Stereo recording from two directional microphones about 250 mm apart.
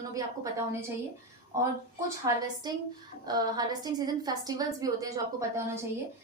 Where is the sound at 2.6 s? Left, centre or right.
Centre.